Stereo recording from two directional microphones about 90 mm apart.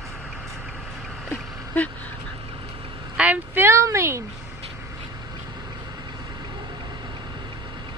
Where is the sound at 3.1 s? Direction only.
15° right (ahead or behind); by 4.2 s 30° right (ahead or behind).